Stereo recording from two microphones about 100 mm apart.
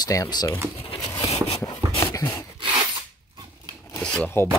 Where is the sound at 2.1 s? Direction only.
35° left (ahead or behind).